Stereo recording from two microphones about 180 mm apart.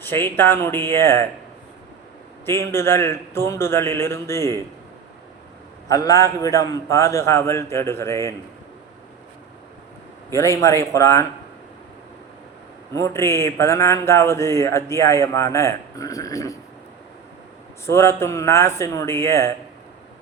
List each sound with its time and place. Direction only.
0.0 s speech: 10° left (ahead or behind)
2.5 s speech: 15° left (ahead or behind)
5.9 s speech: 20° left (ahead or behind)
10.2 s speech: 15° left (ahead or behind)
12.9 s speech: 15° left (ahead or behind)
17.8 s speech: 15° left (ahead or behind)